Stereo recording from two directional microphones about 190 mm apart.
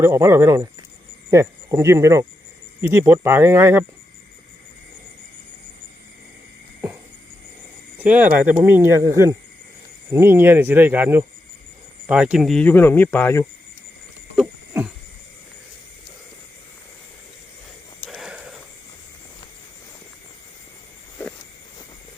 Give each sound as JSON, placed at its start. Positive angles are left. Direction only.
{"t": 0.0, "sound": "speech", "side_deg": -10}
{"t": 7.9, "sound": "speech", "side_deg": -10}
{"t": 18.0, "sound": "a sound", "side_deg": 0}